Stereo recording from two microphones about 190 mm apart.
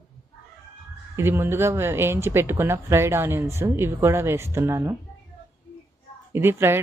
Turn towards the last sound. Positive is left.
turn(degrees=-10)  # may be behind; listen again after turning